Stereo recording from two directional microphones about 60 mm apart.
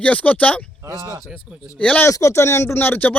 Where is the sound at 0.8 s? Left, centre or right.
Right.